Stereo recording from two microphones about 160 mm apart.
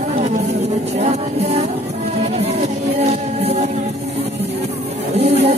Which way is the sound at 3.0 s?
40° right (ahead or behind).